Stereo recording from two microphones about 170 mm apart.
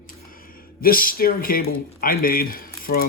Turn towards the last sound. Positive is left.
turn(degrees=60)  # may be behind; listen again after turning